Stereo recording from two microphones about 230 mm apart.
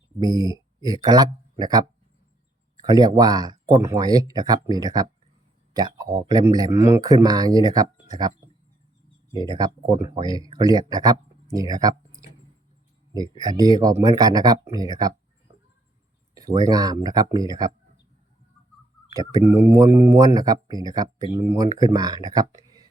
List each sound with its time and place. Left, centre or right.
0.2 s speech: centre
2.8 s speech: centre
9.4 s speech: centre
11.7 s a sound: centre
13.4 s speech: centre
16.3 s speech: centre
19.3 s speech: centre